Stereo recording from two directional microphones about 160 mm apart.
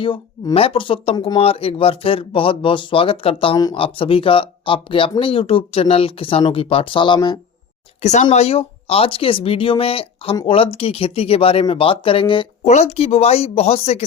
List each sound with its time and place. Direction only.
0.0 s speech: 35° left (ahead or behind)
8.0 s speech: 45° left (ahead or behind)
12.6 s speech: 45° left (ahead or behind)